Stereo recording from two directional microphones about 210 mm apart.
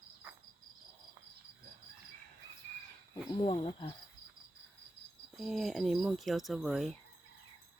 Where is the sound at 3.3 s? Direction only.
25° left (ahead or behind).